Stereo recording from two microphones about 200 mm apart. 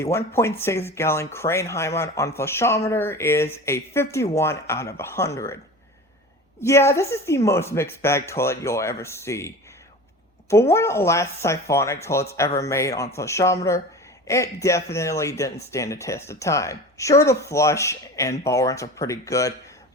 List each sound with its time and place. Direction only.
0.0 s speech: 15° left (ahead or behind)
6.6 s speech: 15° left (ahead or behind)
10.5 s speech: 15° left (ahead or behind)